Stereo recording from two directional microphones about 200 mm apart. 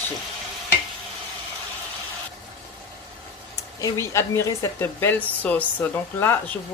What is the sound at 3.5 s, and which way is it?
Speech, 15° left (ahead or behind).